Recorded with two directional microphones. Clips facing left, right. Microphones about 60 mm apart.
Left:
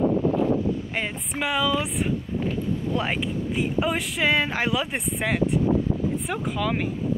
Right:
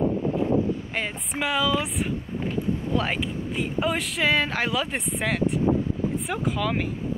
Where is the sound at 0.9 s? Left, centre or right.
Centre.